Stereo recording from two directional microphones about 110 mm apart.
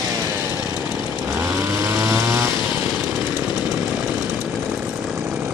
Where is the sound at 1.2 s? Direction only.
20° right (ahead or behind).